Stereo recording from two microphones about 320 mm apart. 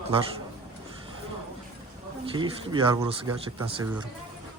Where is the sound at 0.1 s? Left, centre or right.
Centre.